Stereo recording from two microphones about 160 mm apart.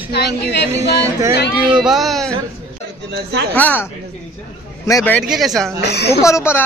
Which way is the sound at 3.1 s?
90° right.